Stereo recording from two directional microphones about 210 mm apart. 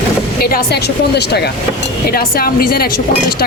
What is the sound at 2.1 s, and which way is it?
Speech, 45° left (ahead or behind).